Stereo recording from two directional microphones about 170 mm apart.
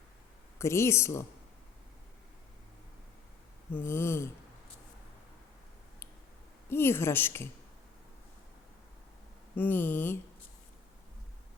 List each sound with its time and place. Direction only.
0.6 s a woman's voice: 15° left (ahead or behind)
3.8 s a woman's voice: 15° left (ahead or behind)
6.7 s a woman's voice: 15° left (ahead or behind)
9.6 s a woman's voice: 10° left (ahead or behind)